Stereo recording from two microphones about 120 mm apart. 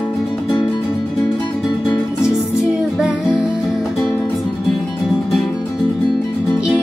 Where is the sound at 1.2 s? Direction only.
40° left (ahead or behind).